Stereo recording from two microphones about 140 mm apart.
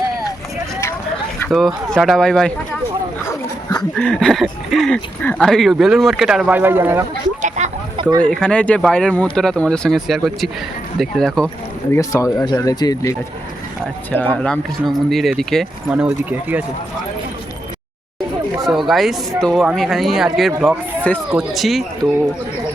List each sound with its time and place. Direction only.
1.5 s speech: centre (ahead or behind)
3.2 s dog: 25° left (ahead or behind)
3.9 s speech: 5° left (ahead or behind); by 7.0 s 15° right (ahead or behind)
7.4 s a sound: 60° right (ahead or behind)
8.2 s speech: 5° left (ahead or behind)
11.9 s speech: 25° left (ahead or behind)
14.1 s speech: 15° left (ahead or behind)
15.9 s speech: 5° right (ahead or behind)
18.6 s speech: centre (ahead or behind)